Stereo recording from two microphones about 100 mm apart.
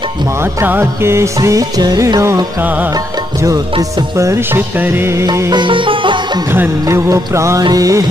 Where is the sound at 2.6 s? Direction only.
15° right (ahead or behind).